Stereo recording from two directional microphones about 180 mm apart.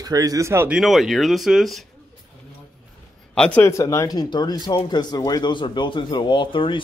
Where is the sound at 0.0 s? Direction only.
20° right (ahead or behind).